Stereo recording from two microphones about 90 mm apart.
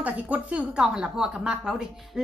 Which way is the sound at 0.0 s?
15° right (ahead or behind).